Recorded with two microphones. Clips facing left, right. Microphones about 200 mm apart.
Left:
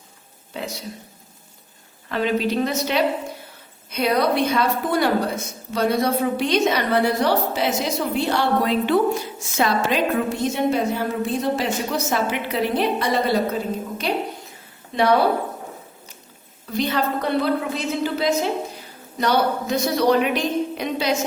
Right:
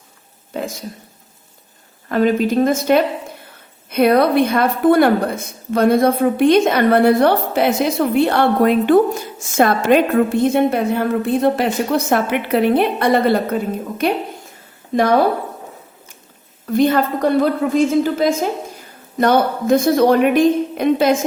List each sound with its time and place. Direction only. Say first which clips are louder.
0.5 s a sound: right 6 dB; 50° right (ahead or behind)
2.0 s a woman's voice: right 6 dB; 45° right (ahead or behind)
16.6 s a woman's voice: right 8 dB; 50° right (ahead or behind)